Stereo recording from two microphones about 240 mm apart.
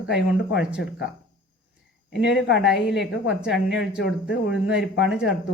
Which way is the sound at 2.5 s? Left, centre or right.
Centre.